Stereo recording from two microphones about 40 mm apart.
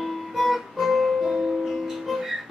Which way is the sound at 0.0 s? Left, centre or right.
Centre.